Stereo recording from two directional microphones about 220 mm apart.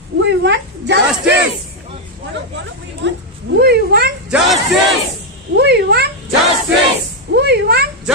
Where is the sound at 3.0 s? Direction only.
50° right (ahead or behind).